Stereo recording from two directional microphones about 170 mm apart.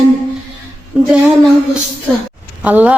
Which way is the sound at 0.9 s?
10° right (ahead or behind).